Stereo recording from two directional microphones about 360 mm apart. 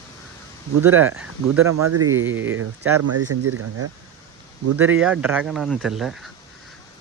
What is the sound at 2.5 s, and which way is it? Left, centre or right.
Speech, right.